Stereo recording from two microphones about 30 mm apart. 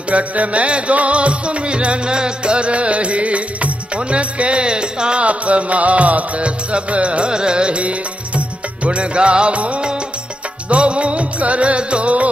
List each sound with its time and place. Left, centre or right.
0.1 s music: right
2.0 s music: right
5.2 s music: right
7.2 s music: right
7.8 s music: right